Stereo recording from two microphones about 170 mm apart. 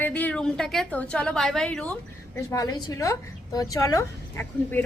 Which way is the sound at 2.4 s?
20° left (ahead or behind).